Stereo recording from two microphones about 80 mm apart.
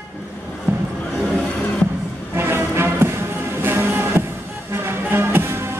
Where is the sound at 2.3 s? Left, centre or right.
Right.